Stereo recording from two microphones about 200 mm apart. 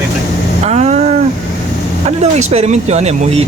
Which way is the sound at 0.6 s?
35° right (ahead or behind).